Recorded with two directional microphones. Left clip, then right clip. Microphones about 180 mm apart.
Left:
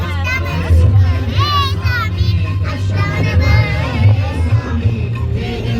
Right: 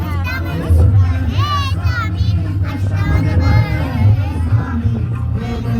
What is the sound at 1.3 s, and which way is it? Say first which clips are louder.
Children playing: left 4 dB; 45° right (ahead or behind).